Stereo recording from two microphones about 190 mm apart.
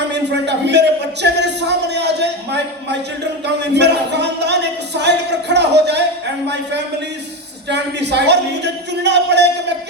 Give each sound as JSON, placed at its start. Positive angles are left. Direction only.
{"t": 0.1, "sound": "a man's voice", "side_deg": -65}
{"t": 3.4, "sound": "a sound", "side_deg": -65}
{"t": 7.7, "sound": "a man's voice", "side_deg": -65}